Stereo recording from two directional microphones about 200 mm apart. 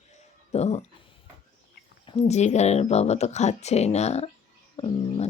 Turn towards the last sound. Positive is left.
turn(degrees=25)  # may be behind; listen again after turning